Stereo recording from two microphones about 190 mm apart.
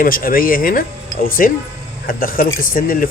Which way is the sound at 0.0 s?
50° left (ahead or behind).